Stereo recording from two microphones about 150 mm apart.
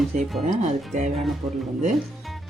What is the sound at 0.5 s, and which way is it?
Speech, 55° right (ahead or behind).